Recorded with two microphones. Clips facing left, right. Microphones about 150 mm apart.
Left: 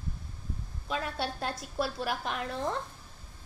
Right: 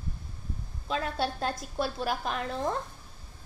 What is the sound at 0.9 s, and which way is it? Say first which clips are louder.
A woman's voice: right 3 dB; 30° right (ahead or behind).